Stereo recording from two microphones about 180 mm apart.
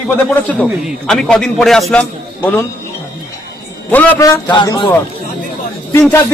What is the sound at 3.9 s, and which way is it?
Speech, 10° left (ahead or behind).